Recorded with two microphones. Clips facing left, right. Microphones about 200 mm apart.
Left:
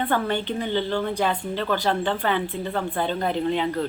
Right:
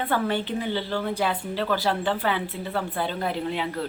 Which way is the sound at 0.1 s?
5° right (ahead or behind).